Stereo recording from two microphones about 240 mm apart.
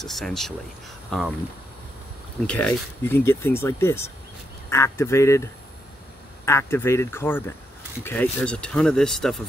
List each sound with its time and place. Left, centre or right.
0.0 s speech: centre
2.4 s speech: centre
6.4 s speech: centre